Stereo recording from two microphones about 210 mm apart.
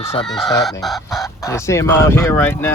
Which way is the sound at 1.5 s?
15° left (ahead or behind).